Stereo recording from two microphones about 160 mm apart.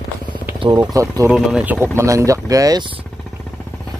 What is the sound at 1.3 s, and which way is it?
Speech, 5° right (ahead or behind).